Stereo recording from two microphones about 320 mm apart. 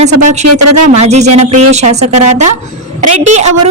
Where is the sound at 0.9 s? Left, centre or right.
Right.